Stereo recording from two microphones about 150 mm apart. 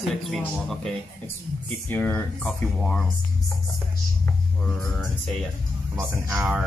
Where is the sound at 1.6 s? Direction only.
10° left (ahead or behind).